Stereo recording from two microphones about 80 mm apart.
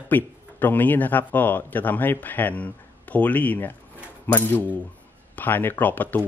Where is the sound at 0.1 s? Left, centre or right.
Left.